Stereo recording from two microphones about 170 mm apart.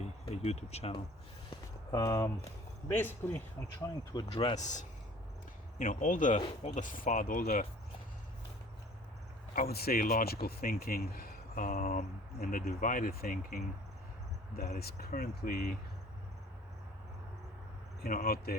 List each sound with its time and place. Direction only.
0.3 s speech: 40° left (ahead or behind)
1.5 s a sound: 20° left (ahead or behind)
2.9 s speech: 10° left (ahead or behind)
4.1 s speech: 30° left (ahead or behind)
4.6 s speech: 45° left (ahead or behind)
6.4 s speech: 35° left (ahead or behind); by 7.7 s 60° left (ahead or behind)
9.6 s speech: 65° left (ahead or behind)
14.8 s speech: 65° left (ahead or behind)
18.0 s speech: 60° left (ahead or behind)